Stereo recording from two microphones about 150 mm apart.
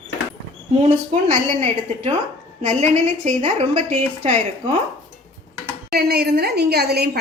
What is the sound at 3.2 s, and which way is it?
Speech, 45° right (ahead or behind).